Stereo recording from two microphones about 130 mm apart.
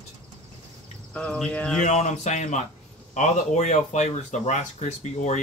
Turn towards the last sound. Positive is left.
turn(degrees=60)  # may be behind; listen again after turning